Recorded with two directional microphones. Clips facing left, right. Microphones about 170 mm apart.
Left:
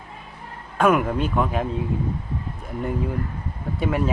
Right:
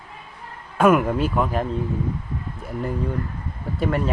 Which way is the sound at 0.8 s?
Centre (ahead or behind).